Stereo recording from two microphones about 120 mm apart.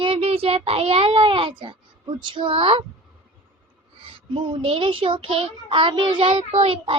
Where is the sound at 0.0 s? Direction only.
50° right (ahead or behind).